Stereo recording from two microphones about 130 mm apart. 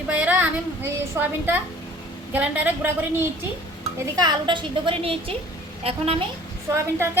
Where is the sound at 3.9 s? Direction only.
30° right (ahead or behind); by 6.2 s 45° right (ahead or behind).